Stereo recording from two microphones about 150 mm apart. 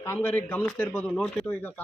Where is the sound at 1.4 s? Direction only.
10° left (ahead or behind).